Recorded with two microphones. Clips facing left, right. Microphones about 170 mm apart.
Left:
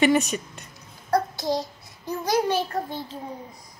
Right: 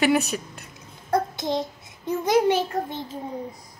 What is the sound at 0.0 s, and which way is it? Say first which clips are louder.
Speech: left 1 dB; centre (ahead or behind).